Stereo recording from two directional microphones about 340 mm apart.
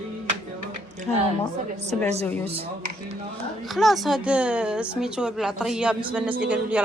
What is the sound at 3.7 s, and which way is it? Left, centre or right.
A man's voice, centre.